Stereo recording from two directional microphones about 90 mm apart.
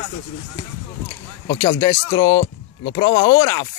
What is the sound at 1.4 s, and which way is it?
Speech, 40° left (ahead or behind).